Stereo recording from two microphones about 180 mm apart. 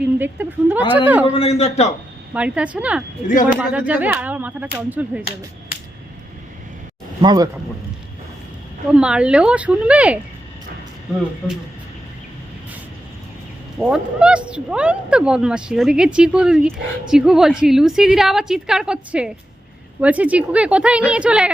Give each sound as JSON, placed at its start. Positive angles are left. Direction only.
{"t": 0.0, "sound": "speech", "side_deg": -10}
{"t": 1.3, "sound": "a man's voice", "side_deg": 35}
{"t": 2.3, "sound": "speech", "side_deg": -5}
{"t": 3.2, "sound": "speech", "side_deg": 45}
{"t": 3.6, "sound": "speech", "side_deg": -10}
{"t": 7.2, "sound": "speech", "side_deg": -20}
{"t": 8.9, "sound": "speech", "side_deg": -5}
{"t": 13.7, "sound": "speech", "side_deg": -5}